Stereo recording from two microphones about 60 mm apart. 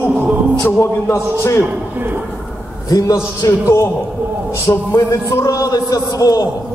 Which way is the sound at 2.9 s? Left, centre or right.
Left.